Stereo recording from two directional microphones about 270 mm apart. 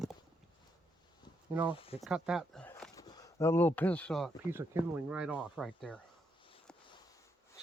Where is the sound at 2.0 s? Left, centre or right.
Centre.